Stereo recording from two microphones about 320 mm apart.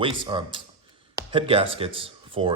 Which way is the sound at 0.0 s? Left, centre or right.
Centre.